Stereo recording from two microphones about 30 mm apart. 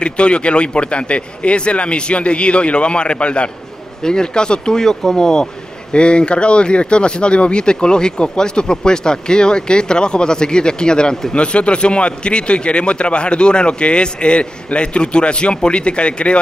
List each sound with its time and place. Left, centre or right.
0.0 s a man's voice: left
4.0 s speech: left
5.9 s speech: left
11.3 s a man's voice: left